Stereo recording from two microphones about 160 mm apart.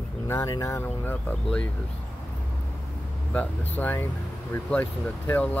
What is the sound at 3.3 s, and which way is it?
Speech, 10° left (ahead or behind).